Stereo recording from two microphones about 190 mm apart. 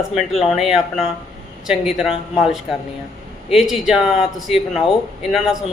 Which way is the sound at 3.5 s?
Centre (ahead or behind).